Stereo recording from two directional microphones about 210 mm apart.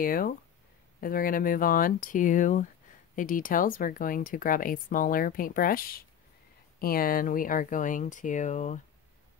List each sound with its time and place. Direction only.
0.0 s speech: 45° left (ahead or behind)